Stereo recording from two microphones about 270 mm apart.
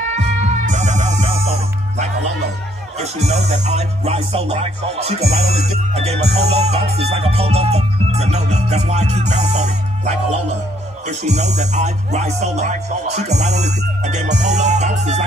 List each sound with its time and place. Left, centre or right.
0.1 s music: right
3.0 s speech: right